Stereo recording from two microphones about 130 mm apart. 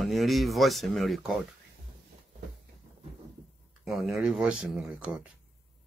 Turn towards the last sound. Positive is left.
turn(degrees=-10)  # may be behind; listen again after turning